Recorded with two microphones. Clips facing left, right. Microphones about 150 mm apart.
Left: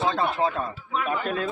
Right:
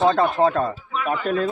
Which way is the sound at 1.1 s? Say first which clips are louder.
Right 7 dB; 40° right (ahead or behind).